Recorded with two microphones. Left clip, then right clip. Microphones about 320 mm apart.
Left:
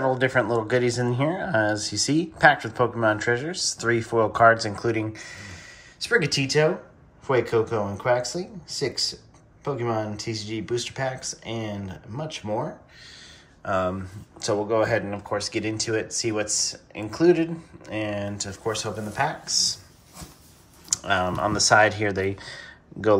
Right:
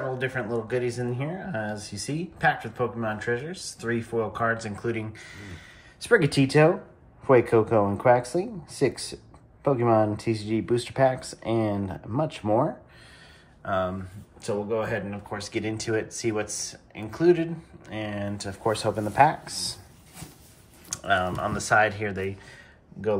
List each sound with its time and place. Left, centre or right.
0.2 s speech: centre
5.9 s speech: centre
13.6 s speech: centre
14.4 s speech: centre
20.9 s speech: centre